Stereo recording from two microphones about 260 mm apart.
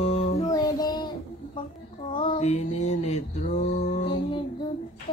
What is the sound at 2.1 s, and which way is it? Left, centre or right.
Mantra, centre.